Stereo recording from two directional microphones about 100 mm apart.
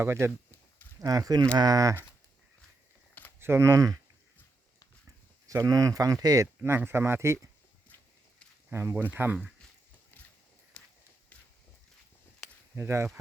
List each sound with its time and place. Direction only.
0.0 s speech: 25° right (ahead or behind)
1.0 s speech: 40° right (ahead or behind)
3.4 s speech: 25° right (ahead or behind)
5.5 s speech: 35° right (ahead or behind)
6.6 s speech: 20° right (ahead or behind)
8.7 s speech: 25° right (ahead or behind)
10.1 s a sound: 20° left (ahead or behind)
10.8 s walk: 15° left (ahead or behind)
12.7 s speech: 30° right (ahead or behind)